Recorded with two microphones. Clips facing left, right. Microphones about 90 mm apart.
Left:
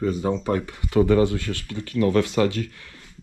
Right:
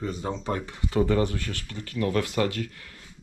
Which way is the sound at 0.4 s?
60° left (ahead or behind).